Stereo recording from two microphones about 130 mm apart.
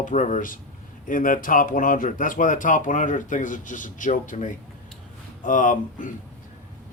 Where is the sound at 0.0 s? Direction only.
80° left.